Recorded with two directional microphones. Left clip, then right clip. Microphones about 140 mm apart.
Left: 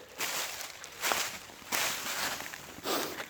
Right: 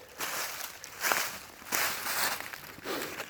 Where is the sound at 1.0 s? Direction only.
15° left (ahead or behind).